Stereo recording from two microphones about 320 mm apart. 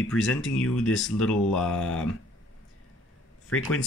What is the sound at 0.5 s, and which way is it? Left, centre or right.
Speech, left.